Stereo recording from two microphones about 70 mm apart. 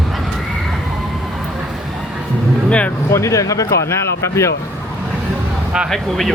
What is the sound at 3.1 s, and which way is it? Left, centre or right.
Speech, left.